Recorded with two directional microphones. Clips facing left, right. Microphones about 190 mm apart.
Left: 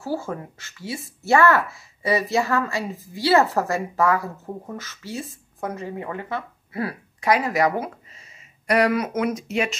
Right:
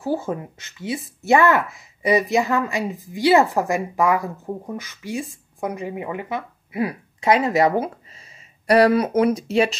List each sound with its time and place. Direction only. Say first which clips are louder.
0.0 s speech: right 4 dB; 20° right (ahead or behind)